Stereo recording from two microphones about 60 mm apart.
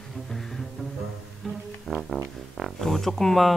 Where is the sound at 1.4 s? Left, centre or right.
Centre.